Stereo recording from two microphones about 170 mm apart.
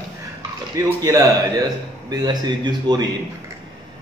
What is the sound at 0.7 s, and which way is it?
A man's voice, 20° right (ahead or behind).